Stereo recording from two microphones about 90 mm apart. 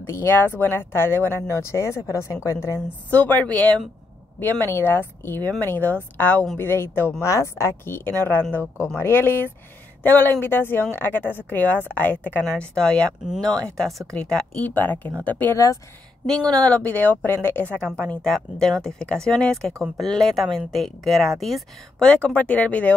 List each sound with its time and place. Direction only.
0.0 s speech: 25° left (ahead or behind)
3.1 s speech: 20° left (ahead or behind)
15.5 s speech: 35° left (ahead or behind)
16.4 s speech: 10° left (ahead or behind)
18.0 s a woman's voice: 5° left (ahead or behind)
22.0 s speech: 15° left (ahead or behind)